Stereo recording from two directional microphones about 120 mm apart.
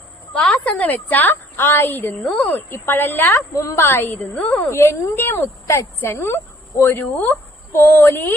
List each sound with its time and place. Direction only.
0.3 s a woman's voice: 10° left (ahead or behind)
4.7 s speech: 20° left (ahead or behind)